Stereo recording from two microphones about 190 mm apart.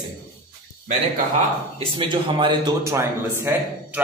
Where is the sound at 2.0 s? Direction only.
25° right (ahead or behind).